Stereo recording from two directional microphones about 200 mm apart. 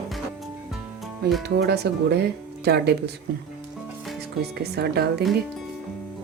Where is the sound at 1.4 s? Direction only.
55° right (ahead or behind).